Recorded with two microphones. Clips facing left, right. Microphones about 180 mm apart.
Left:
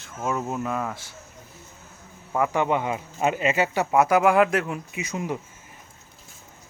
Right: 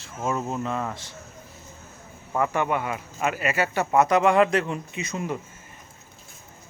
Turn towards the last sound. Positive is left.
turn(degrees=15)  # may be behind; listen again after turning